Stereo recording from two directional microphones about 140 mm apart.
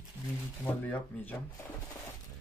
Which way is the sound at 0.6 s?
15° left (ahead or behind).